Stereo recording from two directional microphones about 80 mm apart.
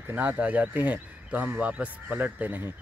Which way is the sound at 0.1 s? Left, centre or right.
Centre.